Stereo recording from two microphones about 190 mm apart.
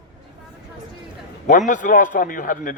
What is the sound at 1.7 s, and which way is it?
Speech, 45° left (ahead or behind).